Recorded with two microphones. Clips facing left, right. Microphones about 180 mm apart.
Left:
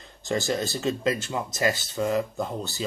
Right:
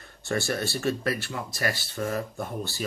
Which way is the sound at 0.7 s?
20° left (ahead or behind).